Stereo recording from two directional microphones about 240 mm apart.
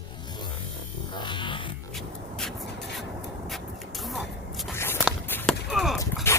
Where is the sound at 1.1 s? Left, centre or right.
Centre.